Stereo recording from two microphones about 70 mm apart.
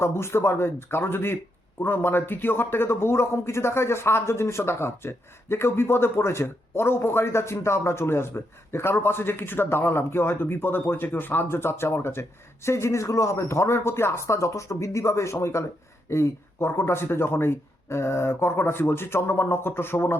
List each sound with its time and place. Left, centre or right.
0.0 s a man's voice: left